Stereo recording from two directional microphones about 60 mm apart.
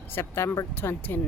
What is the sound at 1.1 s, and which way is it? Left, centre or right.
Speech, left.